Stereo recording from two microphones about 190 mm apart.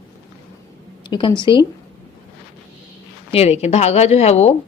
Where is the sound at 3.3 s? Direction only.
35° left (ahead or behind).